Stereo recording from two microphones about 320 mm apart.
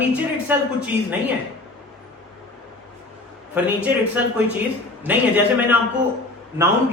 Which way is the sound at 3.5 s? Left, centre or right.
Centre.